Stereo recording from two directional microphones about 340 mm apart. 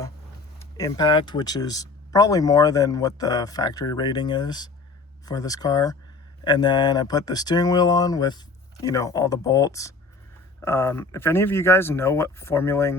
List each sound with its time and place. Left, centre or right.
0.6 s speech: centre